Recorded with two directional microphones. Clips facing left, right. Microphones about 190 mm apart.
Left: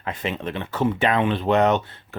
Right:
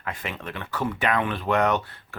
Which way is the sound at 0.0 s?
25° left (ahead or behind).